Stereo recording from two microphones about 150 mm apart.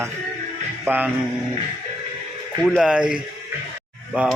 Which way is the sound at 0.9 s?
10° right (ahead or behind).